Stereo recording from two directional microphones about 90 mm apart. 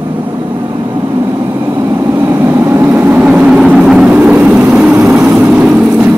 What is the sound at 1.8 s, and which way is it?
Vehicle, 35° right (ahead or behind).